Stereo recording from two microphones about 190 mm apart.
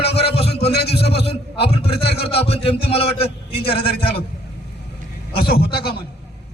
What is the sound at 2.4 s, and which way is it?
A man's voice, 30° left (ahead or behind).